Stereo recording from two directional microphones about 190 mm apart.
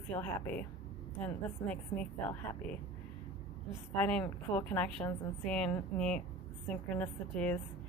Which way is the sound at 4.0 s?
5° left (ahead or behind).